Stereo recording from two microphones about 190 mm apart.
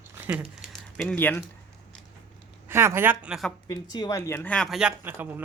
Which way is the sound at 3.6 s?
20° left (ahead or behind).